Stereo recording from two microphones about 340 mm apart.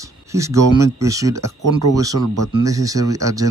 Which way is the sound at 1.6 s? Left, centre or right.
Right.